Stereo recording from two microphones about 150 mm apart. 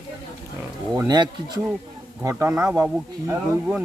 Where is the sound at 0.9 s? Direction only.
25° right (ahead or behind).